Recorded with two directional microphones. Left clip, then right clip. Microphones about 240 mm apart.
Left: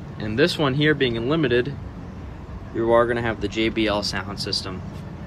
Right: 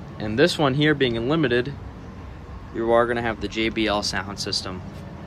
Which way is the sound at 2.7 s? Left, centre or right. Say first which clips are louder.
Left 1 dB; centre.